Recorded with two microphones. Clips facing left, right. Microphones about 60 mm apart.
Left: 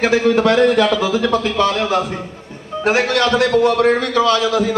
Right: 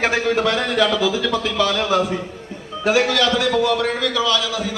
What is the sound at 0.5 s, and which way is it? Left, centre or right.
A man's voice, left.